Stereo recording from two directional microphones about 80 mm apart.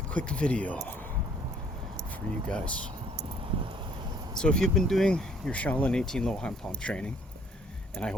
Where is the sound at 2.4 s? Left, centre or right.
Centre.